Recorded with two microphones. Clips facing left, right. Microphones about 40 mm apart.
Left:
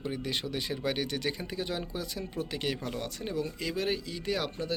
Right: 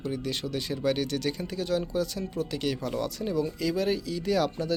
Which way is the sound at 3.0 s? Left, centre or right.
Left.